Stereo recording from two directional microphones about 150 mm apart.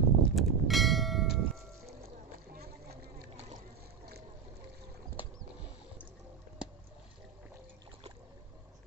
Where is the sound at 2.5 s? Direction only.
90° right.